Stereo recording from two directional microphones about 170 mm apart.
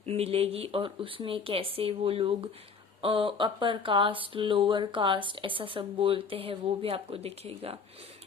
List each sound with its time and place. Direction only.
0.0 s speech: 35° right (ahead or behind)